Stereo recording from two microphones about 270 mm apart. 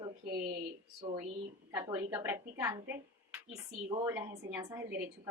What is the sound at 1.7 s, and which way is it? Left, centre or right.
A woman's voice, centre.